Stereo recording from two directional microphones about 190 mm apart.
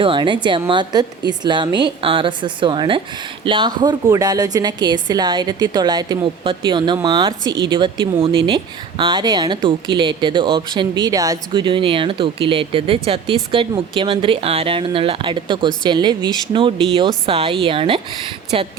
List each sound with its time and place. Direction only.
0.0 s speech: 25° right (ahead or behind)